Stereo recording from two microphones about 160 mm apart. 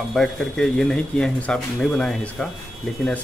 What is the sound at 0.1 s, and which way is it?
Speech, 5° left (ahead or behind).